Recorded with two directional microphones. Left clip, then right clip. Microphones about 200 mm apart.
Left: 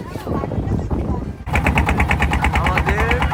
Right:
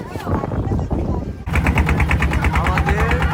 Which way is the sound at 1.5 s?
30° left (ahead or behind).